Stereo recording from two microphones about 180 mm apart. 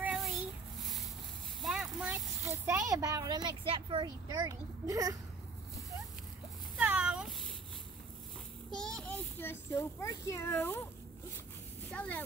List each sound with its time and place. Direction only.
0.0 s child singing: centre (ahead or behind)
0.7 s a sound: centre (ahead or behind)
2.4 s speech: 15° right (ahead or behind)
6.8 s cat: 5° right (ahead or behind)
8.7 s a child's voice: 5° left (ahead or behind)
11.9 s speech: 10° left (ahead or behind)